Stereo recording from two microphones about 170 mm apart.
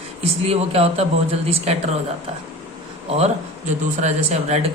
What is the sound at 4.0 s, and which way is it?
Speech, 40° right (ahead or behind).